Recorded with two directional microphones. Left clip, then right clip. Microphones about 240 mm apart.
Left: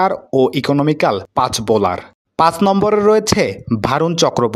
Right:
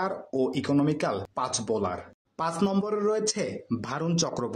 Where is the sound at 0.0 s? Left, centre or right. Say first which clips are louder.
Left 14 dB; left.